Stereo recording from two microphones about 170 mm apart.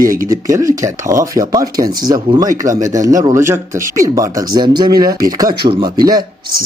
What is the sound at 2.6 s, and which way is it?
Speech, 50° right (ahead or behind).